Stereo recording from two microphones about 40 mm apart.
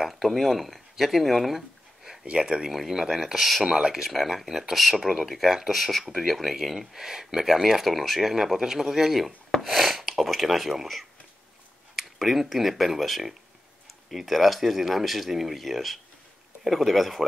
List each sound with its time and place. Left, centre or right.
0.2 s speech: centre
2.2 s speech: right
2.7 s a man's voice: centre
3.6 s a man's voice: centre
4.1 s speech: centre
5.0 s a man's voice: centre
5.3 s a man's voice: centre
11.9 s speech: centre